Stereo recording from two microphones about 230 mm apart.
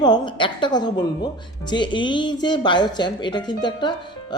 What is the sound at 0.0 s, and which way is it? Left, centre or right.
Speech, centre.